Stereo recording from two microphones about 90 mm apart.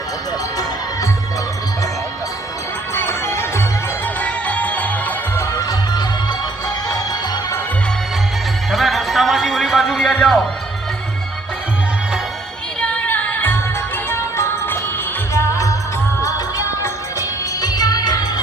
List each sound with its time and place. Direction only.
2.9 s music: 30° left (ahead or behind)
6.8 s music: 40° left (ahead or behind)
8.7 s music: centre (ahead or behind)
12.8 s music: 15° left (ahead or behind); by 18.4 s 45° left (ahead or behind)